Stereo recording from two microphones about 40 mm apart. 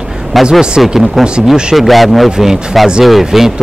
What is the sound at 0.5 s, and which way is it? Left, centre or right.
Speech, centre.